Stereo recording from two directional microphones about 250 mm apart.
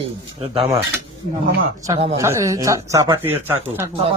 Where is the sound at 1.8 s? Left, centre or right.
Centre.